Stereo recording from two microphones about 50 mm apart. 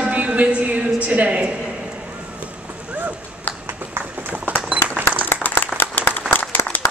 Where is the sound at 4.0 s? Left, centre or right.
Right.